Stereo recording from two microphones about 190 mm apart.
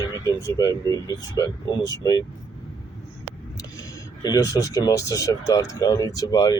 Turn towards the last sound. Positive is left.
turn(degrees=20)  # may be behind; listen again after turning